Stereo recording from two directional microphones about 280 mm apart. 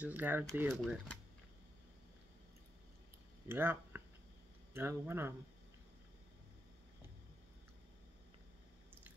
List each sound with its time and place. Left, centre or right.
0.0 s speech: centre
3.4 s speech: centre